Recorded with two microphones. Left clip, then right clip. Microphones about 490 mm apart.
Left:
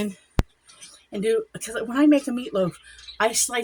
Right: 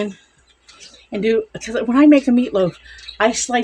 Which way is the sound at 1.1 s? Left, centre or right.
Left.